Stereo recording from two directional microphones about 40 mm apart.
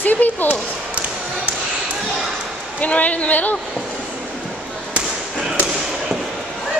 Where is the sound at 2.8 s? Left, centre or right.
Left.